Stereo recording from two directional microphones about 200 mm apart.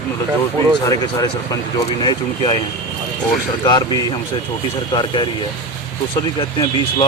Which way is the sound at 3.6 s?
20° left (ahead or behind).